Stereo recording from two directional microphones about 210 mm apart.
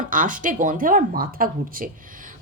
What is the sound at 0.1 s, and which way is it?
A woman's voice, 40° right (ahead or behind).